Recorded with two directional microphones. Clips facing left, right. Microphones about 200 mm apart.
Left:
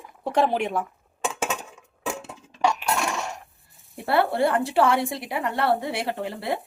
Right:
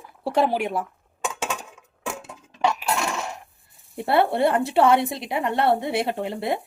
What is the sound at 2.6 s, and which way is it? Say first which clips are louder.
Cutlery: even; 5° right (ahead or behind).